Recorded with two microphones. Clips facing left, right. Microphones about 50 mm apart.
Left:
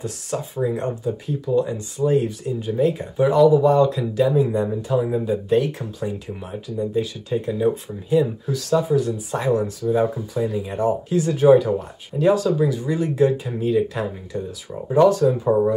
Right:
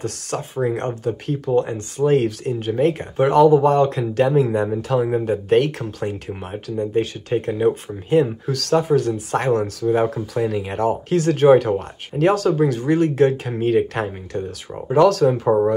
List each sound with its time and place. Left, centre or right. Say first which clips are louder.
0.6 s speech: right 2 dB; right
2.7 s speech: right 1 dB; right
5.1 s speech: right 2 dB; right
14.9 s speech: right 1 dB; right